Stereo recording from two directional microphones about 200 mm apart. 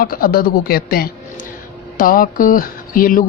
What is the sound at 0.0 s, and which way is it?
Speech, 45° left (ahead or behind).